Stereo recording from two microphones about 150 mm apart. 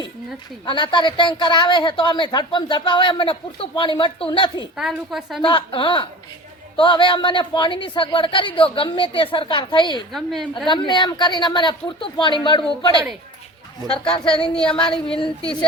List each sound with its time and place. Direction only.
0.6 s a woman's voice: 30° left (ahead or behind)
4.8 s a woman's voice: centre (ahead or behind)
5.4 s a woman's voice: 35° left (ahead or behind)
10.1 s a woman's voice: centre (ahead or behind)
10.7 s a woman's voice: 30° left (ahead or behind)
14.3 s a woman's voice: 5° left (ahead or behind)